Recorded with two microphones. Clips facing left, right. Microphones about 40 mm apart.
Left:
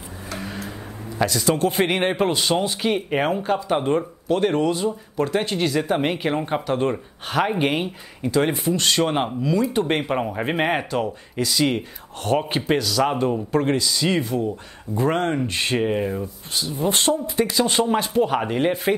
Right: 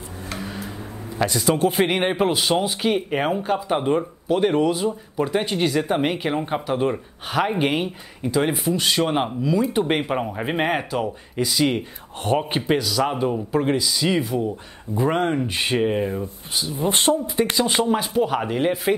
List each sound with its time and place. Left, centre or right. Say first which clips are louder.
1.1 s speech: even; centre
16.6 s speech: even; centre
17.6 s speech: left 2 dB; centre